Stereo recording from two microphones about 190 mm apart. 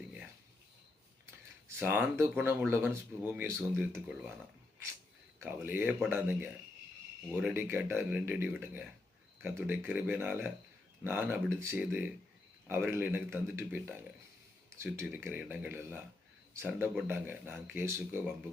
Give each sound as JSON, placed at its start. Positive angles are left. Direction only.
{"t": 1.6, "sound": "speech", "side_deg": -10}
{"t": 5.4, "sound": "speech", "side_deg": -10}